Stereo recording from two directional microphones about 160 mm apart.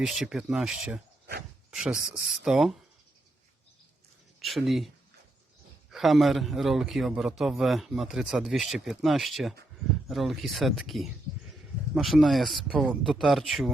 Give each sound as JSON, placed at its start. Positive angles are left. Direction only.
{"t": 0.0, "sound": "a man's voice", "side_deg": 0}
{"t": 4.4, "sound": "speech", "side_deg": 0}
{"t": 5.9, "sound": "a man's voice", "side_deg": 0}